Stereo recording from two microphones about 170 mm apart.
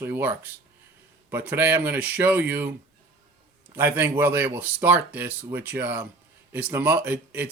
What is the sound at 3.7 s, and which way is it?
Speech, 15° right (ahead or behind).